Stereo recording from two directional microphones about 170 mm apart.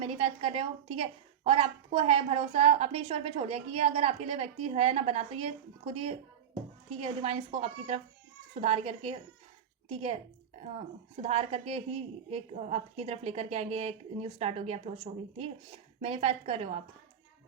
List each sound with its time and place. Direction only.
0.0 s a woman's voice: 35° right (ahead or behind)